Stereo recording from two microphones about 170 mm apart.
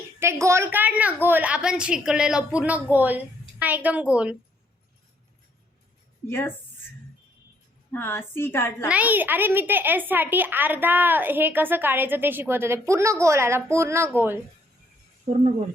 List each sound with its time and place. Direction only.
0.2 s a woman's voice: 15° right (ahead or behind)
6.2 s a woman's voice: 15° left (ahead or behind)
7.9 s a woman's voice: 15° left (ahead or behind)
8.9 s a woman's voice: 10° right (ahead or behind)